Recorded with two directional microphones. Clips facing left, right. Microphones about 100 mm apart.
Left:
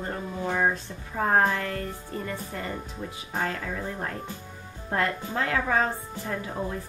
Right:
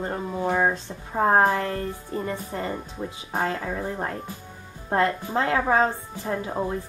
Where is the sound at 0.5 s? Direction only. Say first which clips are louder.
Right 1 dB; 25° right (ahead or behind).